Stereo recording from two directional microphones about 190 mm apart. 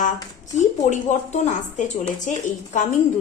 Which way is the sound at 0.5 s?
40° left (ahead or behind).